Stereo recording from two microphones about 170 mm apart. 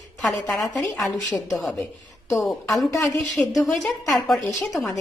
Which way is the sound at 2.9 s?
20° left (ahead or behind).